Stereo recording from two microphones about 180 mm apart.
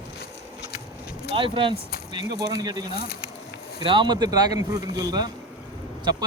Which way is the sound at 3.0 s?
60° left (ahead or behind).